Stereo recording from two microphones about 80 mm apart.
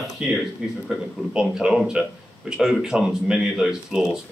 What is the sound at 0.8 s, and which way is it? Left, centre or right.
Speech, centre.